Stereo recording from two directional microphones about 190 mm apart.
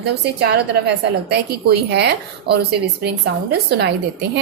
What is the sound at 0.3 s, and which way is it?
Speech, 60° right (ahead or behind).